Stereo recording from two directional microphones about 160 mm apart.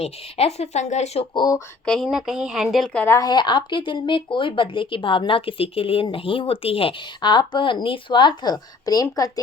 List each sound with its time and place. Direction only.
0.0 s a woman's voice: 40° left (ahead or behind)
1.3 s speech: 25° left (ahead or behind)
1.8 s a woman's voice: 5° left (ahead or behind); by 9.4 s 20° left (ahead or behind)